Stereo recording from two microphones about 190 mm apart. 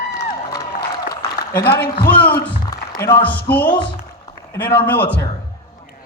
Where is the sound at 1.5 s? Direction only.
55° left (ahead or behind).